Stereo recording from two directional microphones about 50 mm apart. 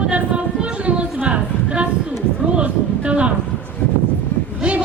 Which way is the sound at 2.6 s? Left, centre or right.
Right.